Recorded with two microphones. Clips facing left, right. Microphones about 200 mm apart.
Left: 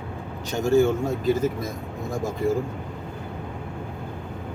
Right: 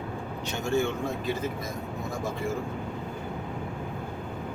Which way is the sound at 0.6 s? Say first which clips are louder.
Left 8 dB; 40° left (ahead or behind).